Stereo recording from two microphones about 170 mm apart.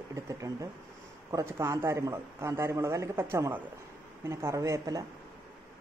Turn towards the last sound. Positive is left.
turn(degrees=-20)  # may be behind; listen again after turning